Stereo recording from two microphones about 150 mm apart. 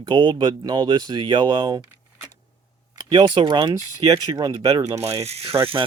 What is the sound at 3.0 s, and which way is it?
Speech, 30° right (ahead or behind).